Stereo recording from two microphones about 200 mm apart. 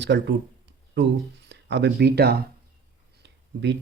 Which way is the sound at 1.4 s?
60° right (ahead or behind).